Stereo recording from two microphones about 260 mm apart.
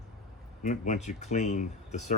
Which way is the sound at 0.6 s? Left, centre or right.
Left.